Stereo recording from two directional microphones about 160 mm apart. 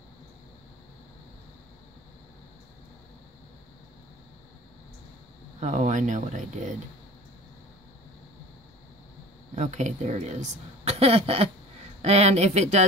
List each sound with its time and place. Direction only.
5.6 s speech: 50° right (ahead or behind)
9.6 s speech: 50° right (ahead or behind)